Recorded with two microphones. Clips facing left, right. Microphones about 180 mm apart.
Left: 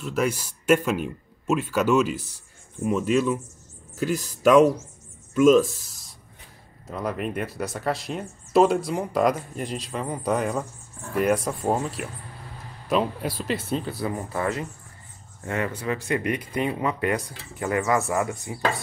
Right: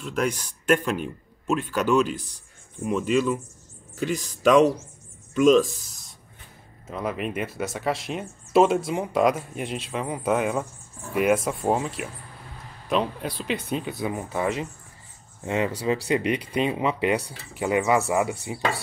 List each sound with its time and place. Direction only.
0.0 s speech: 5° left (ahead or behind)
6.9 s speech: centre (ahead or behind)
13.7 s speech: 15° right (ahead or behind)